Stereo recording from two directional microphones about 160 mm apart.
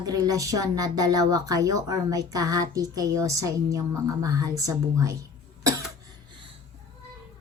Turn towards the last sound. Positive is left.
turn(degrees=-20)  # may be behind; listen again after turning